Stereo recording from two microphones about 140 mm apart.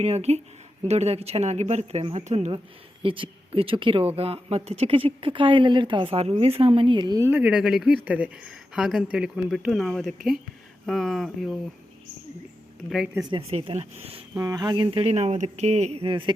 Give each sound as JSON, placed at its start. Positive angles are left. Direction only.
{"t": 0.0, "sound": "speech", "side_deg": -50}
{"t": 3.0, "sound": "speech", "side_deg": -40}
{"t": 7.3, "sound": "speech", "side_deg": -10}
{"t": 13.3, "sound": "speech", "side_deg": -40}
{"t": 14.3, "sound": "speech", "side_deg": -25}